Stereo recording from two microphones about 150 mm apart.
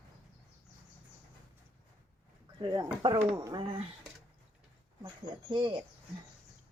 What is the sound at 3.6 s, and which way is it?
Speech, 40° right (ahead or behind).